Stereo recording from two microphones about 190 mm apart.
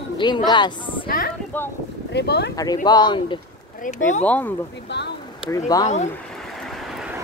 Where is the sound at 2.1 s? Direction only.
60° left (ahead or behind).